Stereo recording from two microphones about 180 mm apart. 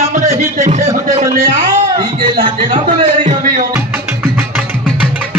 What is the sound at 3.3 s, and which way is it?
Music, 50° right (ahead or behind).